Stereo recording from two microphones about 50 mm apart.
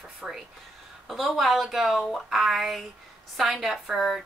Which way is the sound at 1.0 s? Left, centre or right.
Centre.